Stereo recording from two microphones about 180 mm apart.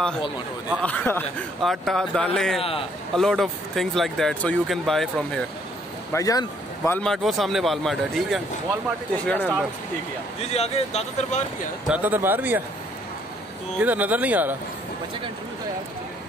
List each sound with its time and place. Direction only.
0.8 s a man's voice: 10° left (ahead or behind)
2.6 s speech: 30° left (ahead or behind)
3.2 s speech: centre (ahead or behind)
6.1 s speech: 20° left (ahead or behind)
7.0 s speech: centre (ahead or behind)
10.4 s speech: 35° left (ahead or behind)
11.9 s speech: 10° right (ahead or behind)
13.7 s speech: 10° right (ahead or behind)